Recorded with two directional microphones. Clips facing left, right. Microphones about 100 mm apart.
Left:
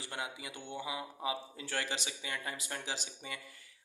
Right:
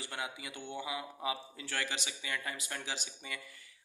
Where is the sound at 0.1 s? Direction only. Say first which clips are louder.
Left 1 dB; 30° left (ahead or behind).